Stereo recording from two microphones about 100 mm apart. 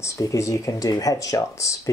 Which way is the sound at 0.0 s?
35° left (ahead or behind).